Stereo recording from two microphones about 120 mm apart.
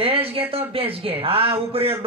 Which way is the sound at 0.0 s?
50° right (ahead or behind).